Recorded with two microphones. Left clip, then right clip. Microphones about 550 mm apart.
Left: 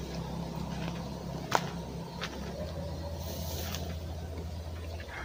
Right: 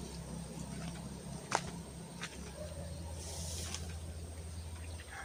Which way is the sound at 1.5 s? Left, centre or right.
Right.